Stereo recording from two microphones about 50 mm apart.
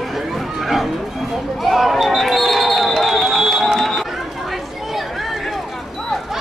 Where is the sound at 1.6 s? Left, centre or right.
Centre.